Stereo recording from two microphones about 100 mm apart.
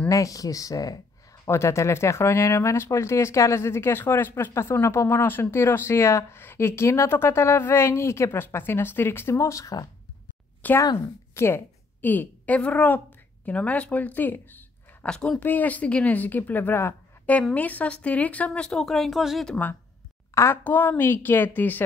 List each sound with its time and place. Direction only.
0.1 s speech: 35° left (ahead or behind)
10.6 s a woman's voice: 15° left (ahead or behind)
15.0 s a woman's voice: 5° left (ahead or behind)
20.3 s speech: 20° left (ahead or behind)